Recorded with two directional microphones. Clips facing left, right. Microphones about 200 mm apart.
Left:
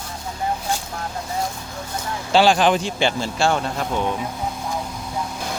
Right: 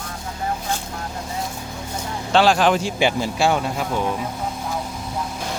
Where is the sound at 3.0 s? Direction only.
15° right (ahead or behind).